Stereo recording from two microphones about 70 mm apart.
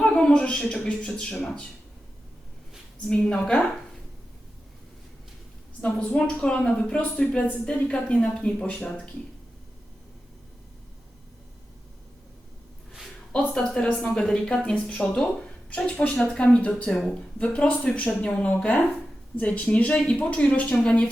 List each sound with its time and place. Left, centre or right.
0.0 s a woman's voice: centre
3.1 s speech: centre
5.8 s speech: centre
13.5 s speech: centre